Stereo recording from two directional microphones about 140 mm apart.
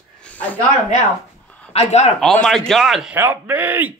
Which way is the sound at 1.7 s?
50° left (ahead or behind).